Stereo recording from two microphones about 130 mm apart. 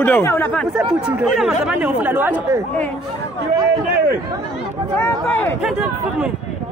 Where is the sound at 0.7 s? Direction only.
5° right (ahead or behind).